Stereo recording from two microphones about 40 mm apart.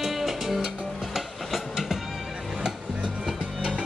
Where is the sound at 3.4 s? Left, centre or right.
Right.